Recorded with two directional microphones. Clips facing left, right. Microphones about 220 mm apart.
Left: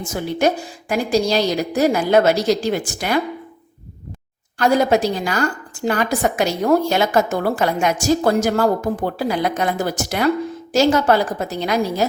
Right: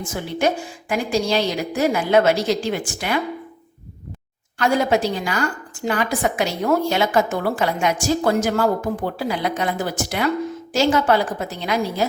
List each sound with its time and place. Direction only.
0.0 s a woman's voice: 40° left (ahead or behind)
4.5 s a woman's voice: 40° left (ahead or behind)